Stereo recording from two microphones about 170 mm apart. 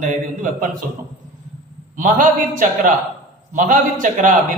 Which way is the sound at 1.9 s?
50° right (ahead or behind).